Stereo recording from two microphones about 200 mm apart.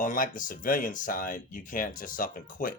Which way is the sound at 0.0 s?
40° left (ahead or behind).